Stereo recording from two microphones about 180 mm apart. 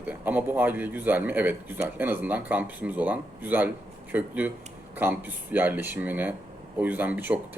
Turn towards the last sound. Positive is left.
turn(degrees=-10)  # may be behind; listen again after turning